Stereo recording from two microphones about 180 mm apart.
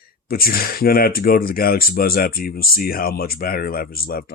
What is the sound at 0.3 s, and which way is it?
Speech, 55° left (ahead or behind).